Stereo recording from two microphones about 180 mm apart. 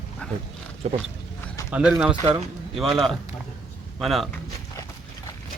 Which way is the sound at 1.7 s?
5° right (ahead or behind).